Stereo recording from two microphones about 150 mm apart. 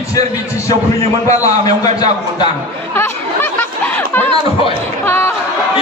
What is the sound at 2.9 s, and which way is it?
Chatter, 15° left (ahead or behind).